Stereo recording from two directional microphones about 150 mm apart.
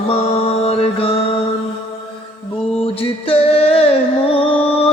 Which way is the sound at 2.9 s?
40° left (ahead or behind).